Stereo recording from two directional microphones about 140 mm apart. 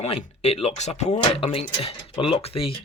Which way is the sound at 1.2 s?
40° left (ahead or behind).